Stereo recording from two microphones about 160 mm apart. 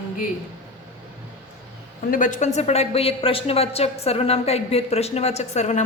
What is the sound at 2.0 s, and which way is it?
A woman's voice, 55° left (ahead or behind).